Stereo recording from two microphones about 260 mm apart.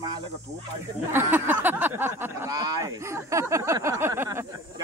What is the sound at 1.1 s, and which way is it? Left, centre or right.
Speech, centre.